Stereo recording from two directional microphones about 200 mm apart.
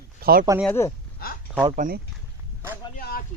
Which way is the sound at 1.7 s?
40° right (ahead or behind).